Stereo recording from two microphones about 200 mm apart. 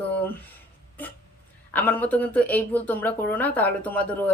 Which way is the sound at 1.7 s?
10° left (ahead or behind).